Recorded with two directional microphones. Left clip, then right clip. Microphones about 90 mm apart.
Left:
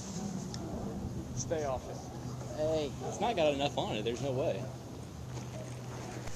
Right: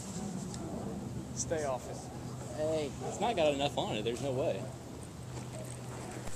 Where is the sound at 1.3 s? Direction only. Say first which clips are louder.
Even; 25° right (ahead or behind).